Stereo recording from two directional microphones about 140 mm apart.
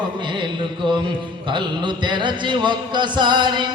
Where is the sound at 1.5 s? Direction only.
35° right (ahead or behind).